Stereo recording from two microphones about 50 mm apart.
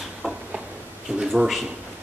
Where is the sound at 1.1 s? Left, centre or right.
Centre.